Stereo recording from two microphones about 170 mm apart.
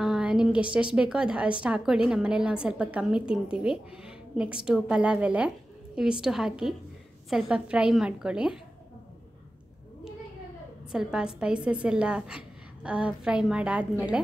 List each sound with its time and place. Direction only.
0.0 s a woman's voice: 5° right (ahead or behind)
10.9 s a woman's voice: 5° right (ahead or behind)